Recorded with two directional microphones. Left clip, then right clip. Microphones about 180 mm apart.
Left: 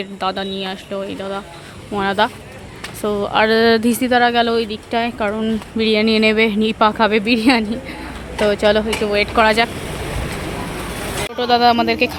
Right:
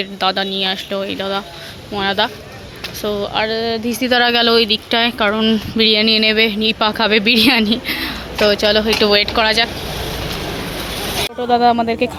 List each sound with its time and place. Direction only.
0.0 s speech: 10° left (ahead or behind)
1.9 s speech: 20° left (ahead or behind)
3.4 s speech: 45° left (ahead or behind)
4.0 s speech: 5° left (ahead or behind)
8.4 s a woman's voice: 10° left (ahead or behind)
9.0 s speech: centre (ahead or behind)
9.3 s a woman's voice: 15° left (ahead or behind)
11.3 s speech: 10° right (ahead or behind)